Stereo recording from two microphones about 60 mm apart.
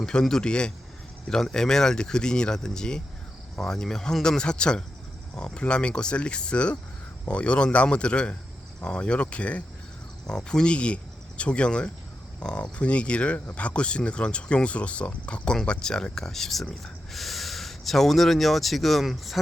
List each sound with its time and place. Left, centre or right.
0.0 s speech: centre